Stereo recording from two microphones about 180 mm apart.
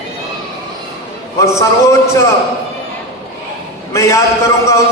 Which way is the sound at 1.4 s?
15° left (ahead or behind).